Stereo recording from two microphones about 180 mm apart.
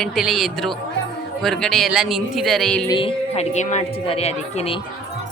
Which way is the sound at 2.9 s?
30° left (ahead or behind).